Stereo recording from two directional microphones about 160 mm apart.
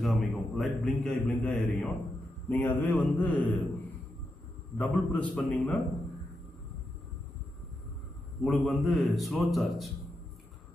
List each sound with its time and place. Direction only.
0.0 s a man's voice: centre (ahead or behind)
8.4 s a man's voice: centre (ahead or behind)